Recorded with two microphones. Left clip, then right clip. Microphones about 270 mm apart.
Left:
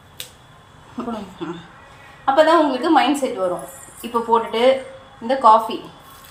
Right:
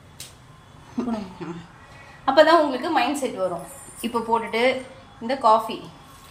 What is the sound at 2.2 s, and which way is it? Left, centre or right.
A woman's voice, right.